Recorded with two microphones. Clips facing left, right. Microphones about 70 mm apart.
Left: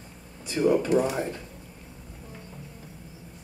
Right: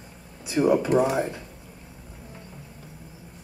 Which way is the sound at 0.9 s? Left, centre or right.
Right.